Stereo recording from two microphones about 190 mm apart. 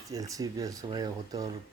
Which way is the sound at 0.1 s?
20° right (ahead or behind).